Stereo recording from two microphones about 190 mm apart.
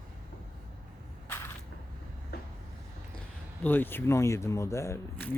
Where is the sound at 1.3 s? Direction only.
10° left (ahead or behind).